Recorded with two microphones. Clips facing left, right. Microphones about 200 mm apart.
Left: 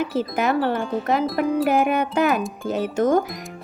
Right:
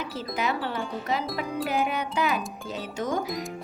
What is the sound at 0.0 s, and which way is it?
Speech, 55° left (ahead or behind).